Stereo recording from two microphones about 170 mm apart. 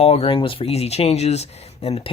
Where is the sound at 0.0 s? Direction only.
35° left (ahead or behind).